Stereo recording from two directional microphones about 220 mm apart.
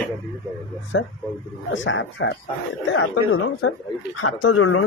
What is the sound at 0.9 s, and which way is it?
Speech, 60° left (ahead or behind).